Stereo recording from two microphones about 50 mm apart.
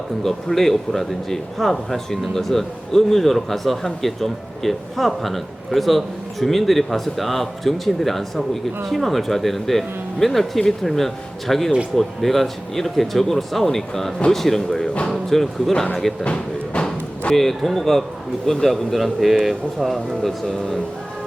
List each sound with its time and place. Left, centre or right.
0.2 s speech: centre
16.2 s a sound: centre
17.3 s speech: centre